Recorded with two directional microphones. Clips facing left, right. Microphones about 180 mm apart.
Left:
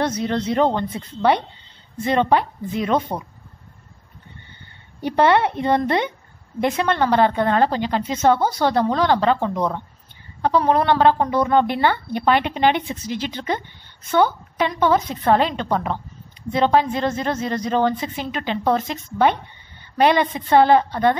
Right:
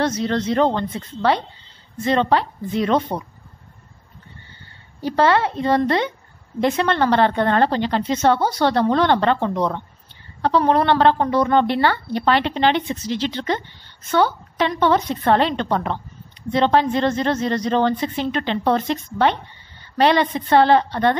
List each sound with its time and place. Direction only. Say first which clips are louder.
0.0 s a woman's voice: right 1 dB; 10° left (ahead or behind)
5.0 s a woman's voice: left 1 dB; 20° left (ahead or behind)